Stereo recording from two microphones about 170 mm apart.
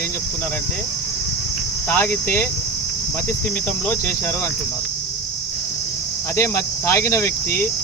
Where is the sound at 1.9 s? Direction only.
10° left (ahead or behind).